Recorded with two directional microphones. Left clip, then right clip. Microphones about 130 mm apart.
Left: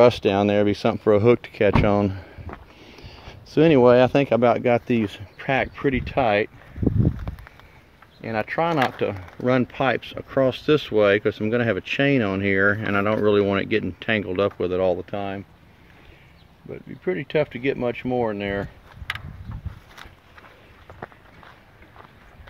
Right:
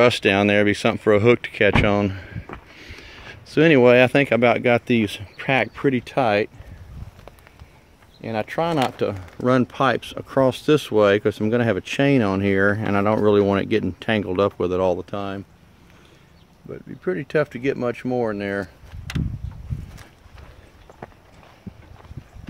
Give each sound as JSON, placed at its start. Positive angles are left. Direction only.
{"t": 0.2, "sound": "speech", "side_deg": 0}
{"t": 4.8, "sound": "speech", "side_deg": -25}
{"t": 5.2, "sound": "speech", "side_deg": -40}
{"t": 8.2, "sound": "speech", "side_deg": -25}
{"t": 9.5, "sound": "speech", "side_deg": -40}
{"t": 10.4, "sound": "speech", "side_deg": -50}
{"t": 13.2, "sound": "speech", "side_deg": -45}
{"t": 15.0, "sound": "speech", "side_deg": -30}
{"t": 16.7, "sound": "speech", "side_deg": -15}